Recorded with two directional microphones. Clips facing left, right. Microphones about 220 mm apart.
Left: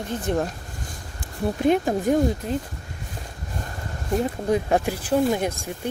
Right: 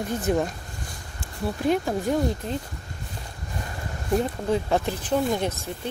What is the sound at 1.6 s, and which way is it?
Speech, 20° left (ahead or behind).